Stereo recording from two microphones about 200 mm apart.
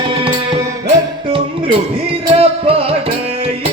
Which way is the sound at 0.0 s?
25° right (ahead or behind).